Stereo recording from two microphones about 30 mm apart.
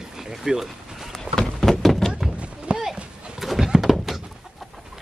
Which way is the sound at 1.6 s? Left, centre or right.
Centre.